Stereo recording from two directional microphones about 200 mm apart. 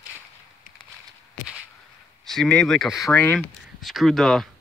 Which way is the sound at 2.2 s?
Centre (ahead or behind).